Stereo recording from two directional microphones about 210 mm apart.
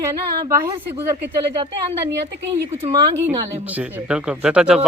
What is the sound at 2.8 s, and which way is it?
Speech, 20° right (ahead or behind).